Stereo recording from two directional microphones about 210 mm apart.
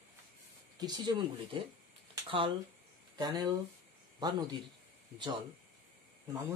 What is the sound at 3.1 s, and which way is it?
A man's voice, 20° right (ahead or behind).